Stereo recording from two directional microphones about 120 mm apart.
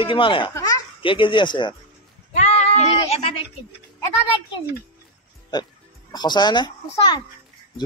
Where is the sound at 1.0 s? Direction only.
45° left (ahead or behind).